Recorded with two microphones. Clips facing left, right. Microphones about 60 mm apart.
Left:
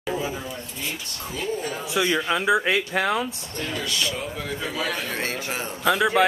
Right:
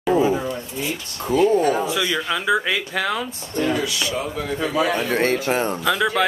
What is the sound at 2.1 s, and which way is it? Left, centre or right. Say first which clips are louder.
Speech: even; centre.